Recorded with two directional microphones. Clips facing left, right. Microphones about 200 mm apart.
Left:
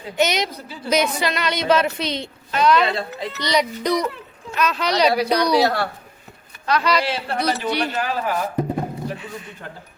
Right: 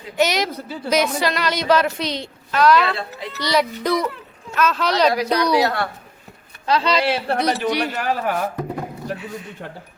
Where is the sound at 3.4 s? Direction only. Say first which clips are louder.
Right 1 dB; 5° right (ahead or behind).